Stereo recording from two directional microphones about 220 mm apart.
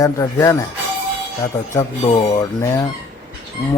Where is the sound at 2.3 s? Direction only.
15° left (ahead or behind).